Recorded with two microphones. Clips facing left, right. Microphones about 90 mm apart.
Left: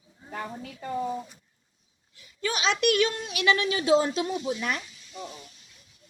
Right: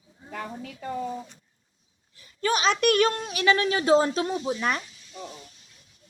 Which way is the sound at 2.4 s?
45° right (ahead or behind).